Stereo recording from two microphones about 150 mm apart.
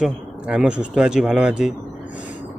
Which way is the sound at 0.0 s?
5° right (ahead or behind).